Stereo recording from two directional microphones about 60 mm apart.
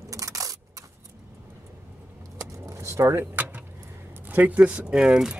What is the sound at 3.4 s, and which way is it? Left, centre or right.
Vehicle, right.